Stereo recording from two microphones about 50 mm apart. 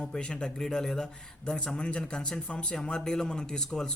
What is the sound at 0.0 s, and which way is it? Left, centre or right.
Speech, centre.